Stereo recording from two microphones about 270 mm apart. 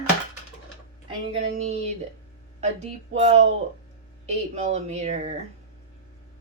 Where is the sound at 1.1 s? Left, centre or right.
Right.